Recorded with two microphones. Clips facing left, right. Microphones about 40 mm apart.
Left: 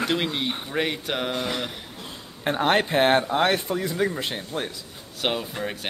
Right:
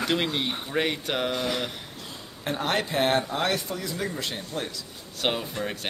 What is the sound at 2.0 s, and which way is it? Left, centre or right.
Speech, left.